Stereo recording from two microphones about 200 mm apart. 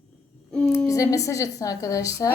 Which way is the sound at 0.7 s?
15° left (ahead or behind).